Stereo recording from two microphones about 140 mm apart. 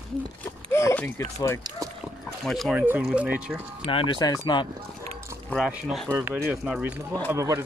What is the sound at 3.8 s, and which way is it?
Speech, 35° left (ahead or behind).